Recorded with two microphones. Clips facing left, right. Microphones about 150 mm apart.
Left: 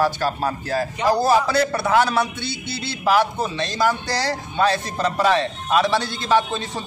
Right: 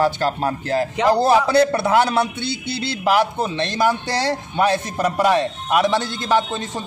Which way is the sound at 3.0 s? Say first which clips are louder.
Even; 15° right (ahead or behind).